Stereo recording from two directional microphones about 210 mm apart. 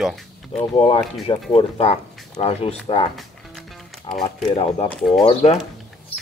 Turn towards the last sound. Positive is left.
turn(degrees=30)  # may be behind; listen again after turning